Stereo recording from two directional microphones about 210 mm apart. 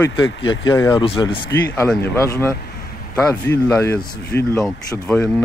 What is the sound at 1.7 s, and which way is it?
Speech, 5° left (ahead or behind).